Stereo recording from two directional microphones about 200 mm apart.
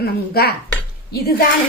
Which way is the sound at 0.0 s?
55° left (ahead or behind).